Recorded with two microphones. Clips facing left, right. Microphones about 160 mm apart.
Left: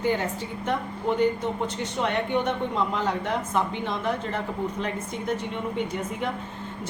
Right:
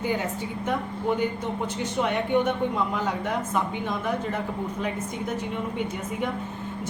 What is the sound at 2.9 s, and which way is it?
Speech, 5° right (ahead or behind).